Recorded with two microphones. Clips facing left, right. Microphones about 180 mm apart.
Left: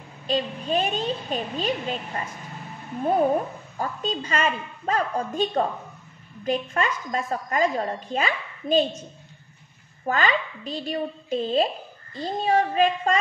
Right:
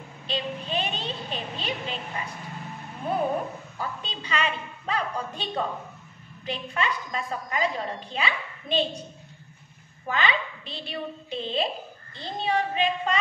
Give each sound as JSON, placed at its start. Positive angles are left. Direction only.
{"t": 0.3, "sound": "a woman's voice", "side_deg": 45}
{"t": 3.7, "sound": "a woman's voice", "side_deg": 45}
{"t": 10.0, "sound": "a woman's voice", "side_deg": 45}